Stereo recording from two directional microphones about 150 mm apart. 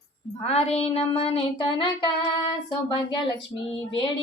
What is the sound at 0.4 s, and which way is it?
Child singing, 45° left (ahead or behind).